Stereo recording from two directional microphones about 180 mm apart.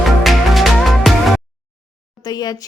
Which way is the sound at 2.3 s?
20° left (ahead or behind).